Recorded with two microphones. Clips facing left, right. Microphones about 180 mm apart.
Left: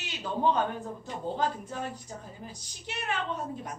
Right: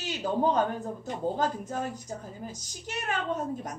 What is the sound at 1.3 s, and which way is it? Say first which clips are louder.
A woman's voice: right 2 dB; 45° right (ahead or behind).